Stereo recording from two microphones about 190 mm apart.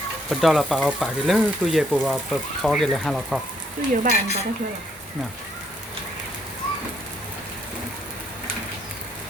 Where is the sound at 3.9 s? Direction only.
45° right (ahead or behind).